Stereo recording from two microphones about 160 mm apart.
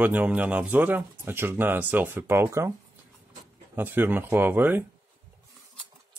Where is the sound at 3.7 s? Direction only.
15° right (ahead or behind).